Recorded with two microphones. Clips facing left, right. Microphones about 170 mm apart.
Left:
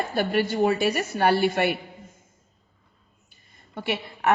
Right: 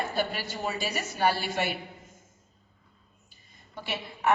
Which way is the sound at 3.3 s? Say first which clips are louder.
Left 2 dB; 60° left (ahead or behind).